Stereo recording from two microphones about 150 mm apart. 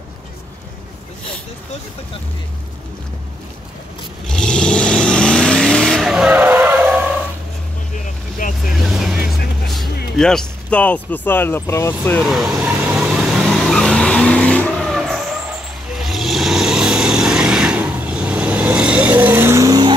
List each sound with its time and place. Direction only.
4.3 s vehicle: 5° left (ahead or behind); by 7.2 s 10° right (ahead or behind)
7.9 s vehicle: 65° left (ahead or behind)
8.7 s vehicle: centre (ahead or behind)
10.1 s speech: 5° left (ahead or behind)
12.2 s vehicle: centre (ahead or behind); by 19.9 s 25° right (ahead or behind)